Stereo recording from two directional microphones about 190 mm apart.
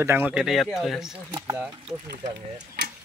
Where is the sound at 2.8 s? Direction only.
60° right (ahead or behind).